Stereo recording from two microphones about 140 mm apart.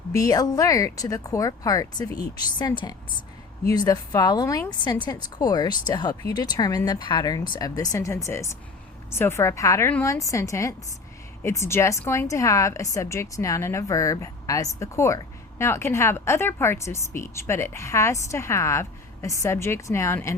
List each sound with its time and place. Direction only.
0.1 s a woman's voice: 25° left (ahead or behind)